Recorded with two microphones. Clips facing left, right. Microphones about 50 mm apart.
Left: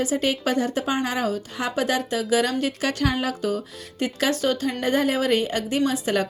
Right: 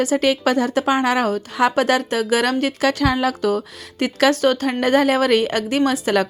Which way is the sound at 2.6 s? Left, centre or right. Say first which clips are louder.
Right 5 dB; right.